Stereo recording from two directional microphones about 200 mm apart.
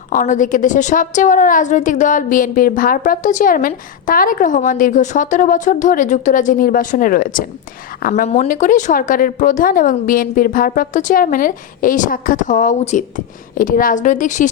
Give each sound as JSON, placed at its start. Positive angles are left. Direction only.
{"t": 0.1, "sound": "a woman's voice", "side_deg": 40}